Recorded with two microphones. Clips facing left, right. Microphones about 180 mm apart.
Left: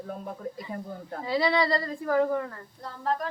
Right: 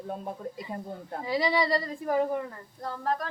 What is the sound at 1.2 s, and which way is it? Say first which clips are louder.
A woman's voice: left 2 dB; 15° right (ahead or behind).